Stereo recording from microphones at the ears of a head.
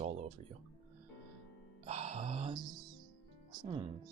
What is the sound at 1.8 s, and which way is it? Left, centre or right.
Music, right.